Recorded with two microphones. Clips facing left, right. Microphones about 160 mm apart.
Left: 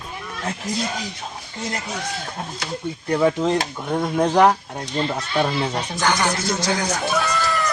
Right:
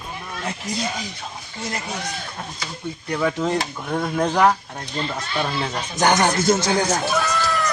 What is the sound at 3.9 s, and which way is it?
Speech, 15° left (ahead or behind).